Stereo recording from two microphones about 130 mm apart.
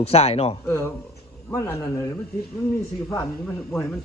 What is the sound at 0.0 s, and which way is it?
Speech, 50° left (ahead or behind).